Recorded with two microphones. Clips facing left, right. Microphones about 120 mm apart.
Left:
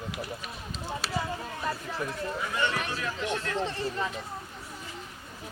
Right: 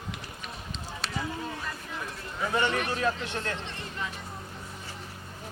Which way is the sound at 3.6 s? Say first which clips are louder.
Left 7 dB; 35° left (ahead or behind).